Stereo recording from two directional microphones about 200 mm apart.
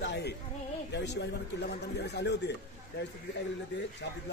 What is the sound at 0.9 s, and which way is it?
Speech, 60° left (ahead or behind).